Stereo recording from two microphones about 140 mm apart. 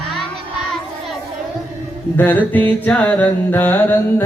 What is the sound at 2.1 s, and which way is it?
Music, 15° left (ahead or behind).